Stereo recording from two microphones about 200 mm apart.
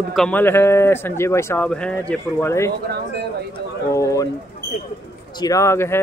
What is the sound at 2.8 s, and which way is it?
Speech, 55° right (ahead or behind).